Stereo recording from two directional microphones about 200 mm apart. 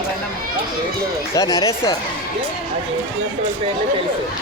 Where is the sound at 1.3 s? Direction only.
20° left (ahead or behind).